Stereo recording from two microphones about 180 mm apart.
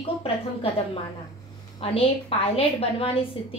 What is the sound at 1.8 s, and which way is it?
A woman's voice, 30° left (ahead or behind).